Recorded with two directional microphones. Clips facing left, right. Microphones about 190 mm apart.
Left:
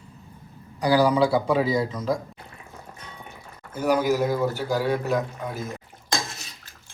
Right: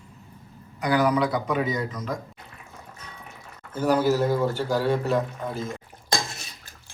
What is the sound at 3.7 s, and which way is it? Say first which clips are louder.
Speech: even; 10° left (ahead or behind).